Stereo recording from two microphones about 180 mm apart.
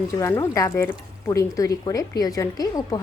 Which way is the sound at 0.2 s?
15° left (ahead or behind).